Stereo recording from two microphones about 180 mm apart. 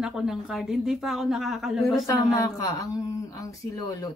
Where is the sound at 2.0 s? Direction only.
20° left (ahead or behind).